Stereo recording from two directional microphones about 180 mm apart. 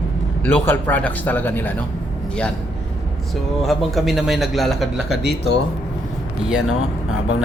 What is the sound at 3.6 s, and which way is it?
A man's voice, centre (ahead or behind).